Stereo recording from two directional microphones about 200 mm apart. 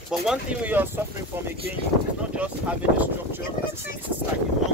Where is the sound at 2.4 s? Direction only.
5° right (ahead or behind).